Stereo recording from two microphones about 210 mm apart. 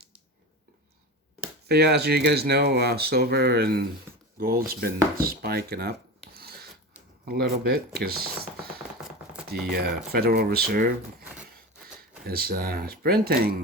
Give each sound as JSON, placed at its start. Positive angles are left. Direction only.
{"t": 1.6, "sound": "speech", "side_deg": -50}
{"t": 5.1, "sound": "a sound", "side_deg": -45}
{"t": 7.3, "sound": "speech", "side_deg": -50}
{"t": 9.0, "sound": "chopping", "side_deg": -5}
{"t": 9.5, "sound": "speech", "side_deg": -50}
{"t": 12.3, "sound": "speech", "side_deg": -45}